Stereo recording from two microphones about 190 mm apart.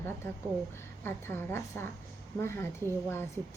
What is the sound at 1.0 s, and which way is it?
A woman's voice, 10° left (ahead or behind).